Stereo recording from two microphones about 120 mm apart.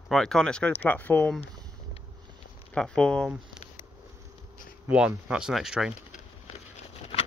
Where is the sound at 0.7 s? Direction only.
15° left (ahead or behind).